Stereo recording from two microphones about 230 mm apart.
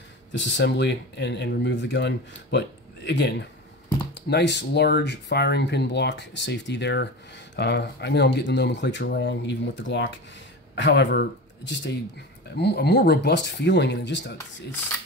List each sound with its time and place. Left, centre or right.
0.3 s speech: left